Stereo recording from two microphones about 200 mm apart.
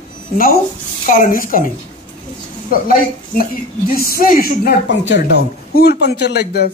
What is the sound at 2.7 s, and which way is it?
A woman's voice, 45° left (ahead or behind).